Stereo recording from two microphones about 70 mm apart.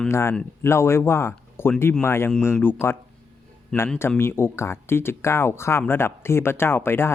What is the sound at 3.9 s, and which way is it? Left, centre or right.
Speech, left.